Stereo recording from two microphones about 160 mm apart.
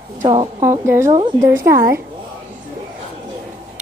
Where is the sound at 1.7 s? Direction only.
70° right (ahead or behind).